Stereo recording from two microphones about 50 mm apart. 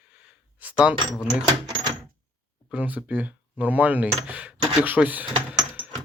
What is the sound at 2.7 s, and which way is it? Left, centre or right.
Speech, right.